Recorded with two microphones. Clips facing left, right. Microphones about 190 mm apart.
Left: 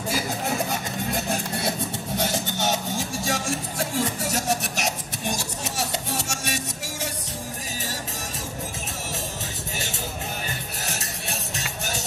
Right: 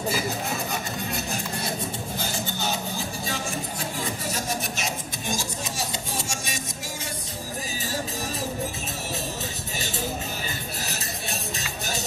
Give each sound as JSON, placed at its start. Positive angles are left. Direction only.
{"t": 2.1, "sound": "music", "side_deg": 80}
{"t": 11.2, "sound": "music", "side_deg": 75}